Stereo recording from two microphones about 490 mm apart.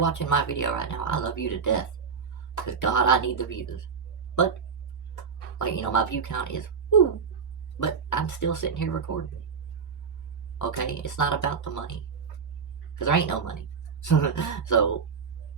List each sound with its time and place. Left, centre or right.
0.0 s speech: left
5.5 s speech: left
10.6 s speech: left
13.0 s speech: left